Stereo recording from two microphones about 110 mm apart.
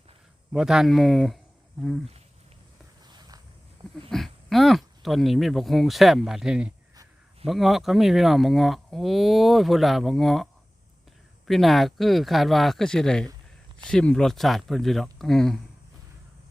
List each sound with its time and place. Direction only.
0.5 s speech: 5° right (ahead or behind)
3.1 s a sound: 35° right (ahead or behind)
4.1 s speech: centre (ahead or behind)